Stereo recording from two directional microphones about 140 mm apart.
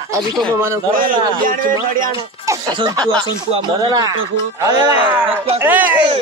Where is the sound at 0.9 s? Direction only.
85° right.